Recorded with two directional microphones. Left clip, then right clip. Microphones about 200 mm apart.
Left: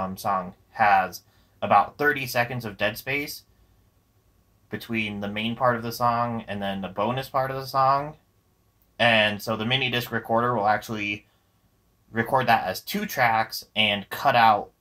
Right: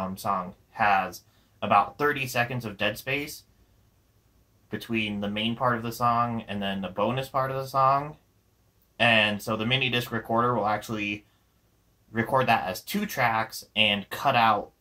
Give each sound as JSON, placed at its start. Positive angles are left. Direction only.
{"t": 0.0, "sound": "speech", "side_deg": 20}
{"t": 4.6, "sound": "speech", "side_deg": 20}